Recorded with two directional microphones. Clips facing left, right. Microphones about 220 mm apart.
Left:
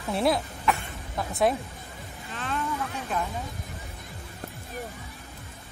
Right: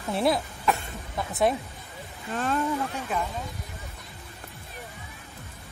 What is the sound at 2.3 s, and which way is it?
Speech, 45° right (ahead or behind).